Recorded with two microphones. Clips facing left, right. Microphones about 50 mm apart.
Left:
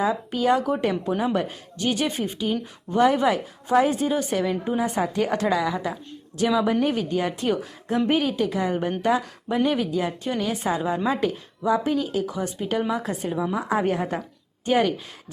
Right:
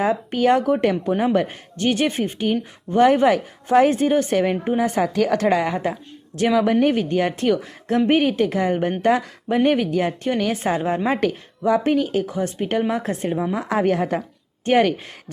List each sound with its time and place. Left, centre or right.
0.0 s a woman's voice: right
11.2 s a woman's voice: right
13.7 s a woman's voice: right
14.6 s speech: right